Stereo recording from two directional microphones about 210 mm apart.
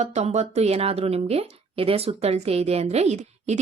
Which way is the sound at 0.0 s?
30° right (ahead or behind).